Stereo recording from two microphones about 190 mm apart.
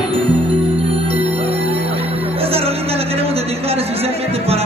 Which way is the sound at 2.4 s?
30° right (ahead or behind).